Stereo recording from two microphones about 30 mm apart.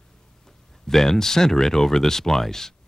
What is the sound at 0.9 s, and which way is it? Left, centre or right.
Speech, centre.